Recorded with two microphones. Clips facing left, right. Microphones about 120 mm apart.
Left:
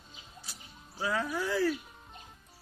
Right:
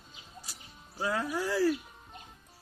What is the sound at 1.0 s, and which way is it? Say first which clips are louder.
Speech: right 1 dB; 5° right (ahead or behind).